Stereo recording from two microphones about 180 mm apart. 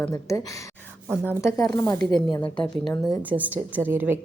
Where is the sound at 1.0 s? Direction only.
10° right (ahead or behind).